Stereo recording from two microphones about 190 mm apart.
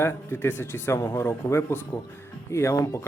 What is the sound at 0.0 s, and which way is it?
Speech, 10° left (ahead or behind).